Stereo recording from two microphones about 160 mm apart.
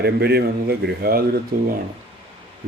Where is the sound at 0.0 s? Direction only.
90° right; by 1.4 s 70° right (ahead or behind).